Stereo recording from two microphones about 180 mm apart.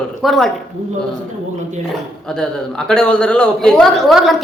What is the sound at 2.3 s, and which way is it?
A man's voice, 5° left (ahead or behind).